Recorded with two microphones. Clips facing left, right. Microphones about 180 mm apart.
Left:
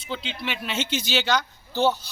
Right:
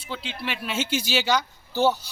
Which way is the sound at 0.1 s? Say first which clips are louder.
Left 1 dB; 5° right (ahead or behind).